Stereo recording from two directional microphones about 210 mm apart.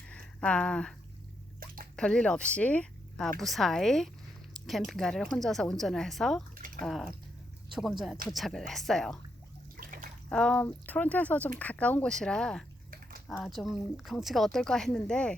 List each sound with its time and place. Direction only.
0.3 s speech: 5° left (ahead or behind)
1.5 s a sound: 40° right (ahead or behind)
2.0 s speech: 5° left (ahead or behind)
9.7 s bathtub: 40° right (ahead or behind)
10.2 s speech: 5° left (ahead or behind)
12.9 s a sound: 40° right (ahead or behind)
13.2 s speech: centre (ahead or behind)